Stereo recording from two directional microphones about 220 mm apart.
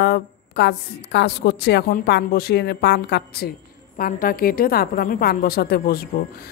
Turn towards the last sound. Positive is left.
turn(degrees=45)  # may be behind; listen again after turning